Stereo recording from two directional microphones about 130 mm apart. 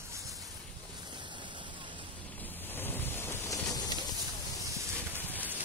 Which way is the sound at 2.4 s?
15° left (ahead or behind).